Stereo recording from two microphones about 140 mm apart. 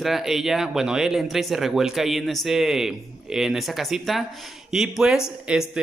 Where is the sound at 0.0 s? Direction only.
Centre (ahead or behind).